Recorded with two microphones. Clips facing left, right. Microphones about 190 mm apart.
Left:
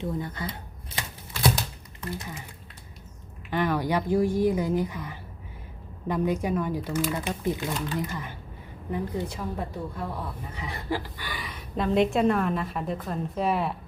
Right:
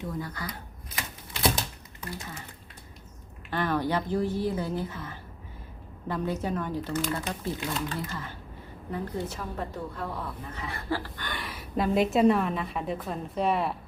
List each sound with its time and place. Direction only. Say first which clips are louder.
0.0 s speech: left 3 dB; 25° left (ahead or behind)
2.0 s speech: left 4 dB; 15° left (ahead or behind)
3.5 s a woman's voice: left 2 dB; 15° left (ahead or behind)